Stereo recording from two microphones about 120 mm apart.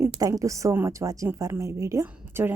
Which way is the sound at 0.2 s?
25° right (ahead or behind).